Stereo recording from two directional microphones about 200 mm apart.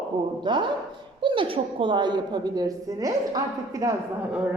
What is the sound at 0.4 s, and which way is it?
A woman's voice, 25° right (ahead or behind).